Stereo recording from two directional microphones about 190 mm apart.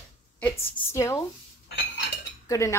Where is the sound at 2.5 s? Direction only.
15° left (ahead or behind).